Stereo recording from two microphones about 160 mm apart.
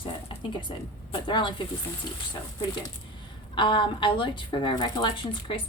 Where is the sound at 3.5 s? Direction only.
30° left (ahead or behind).